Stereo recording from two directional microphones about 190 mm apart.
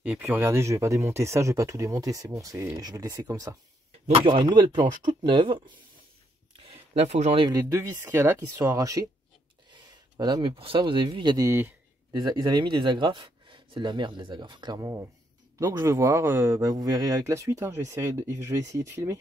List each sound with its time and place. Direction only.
0.0 s speech: 10° right (ahead or behind); by 7.4 s 35° right (ahead or behind)
7.4 s speech: 15° right (ahead or behind)